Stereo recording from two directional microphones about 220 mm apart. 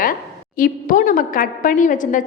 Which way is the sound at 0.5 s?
40° left (ahead or behind).